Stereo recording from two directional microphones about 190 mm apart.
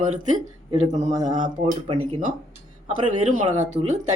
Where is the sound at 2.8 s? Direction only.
45° right (ahead or behind).